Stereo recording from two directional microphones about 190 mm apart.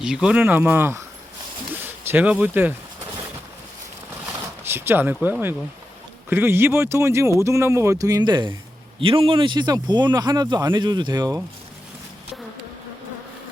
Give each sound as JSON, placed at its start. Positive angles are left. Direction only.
{"t": 0.0, "sound": "speech", "side_deg": -5}
{"t": 4.7, "sound": "speech", "side_deg": -10}